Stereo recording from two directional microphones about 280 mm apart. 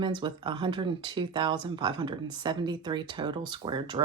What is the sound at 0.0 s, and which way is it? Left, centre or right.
Speech, centre.